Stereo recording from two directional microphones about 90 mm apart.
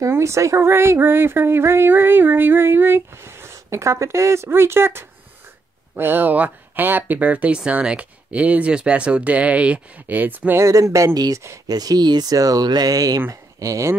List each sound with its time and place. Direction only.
0.1 s speech: 35° right (ahead or behind)
10.6 s speech: 35° right (ahead or behind)
11.1 s speech: 45° right (ahead or behind)
11.4 s speech: 35° right (ahead or behind)
11.7 s speech: 45° right (ahead or behind)